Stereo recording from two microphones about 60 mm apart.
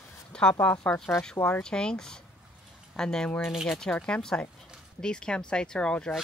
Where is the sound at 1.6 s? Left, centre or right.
Centre.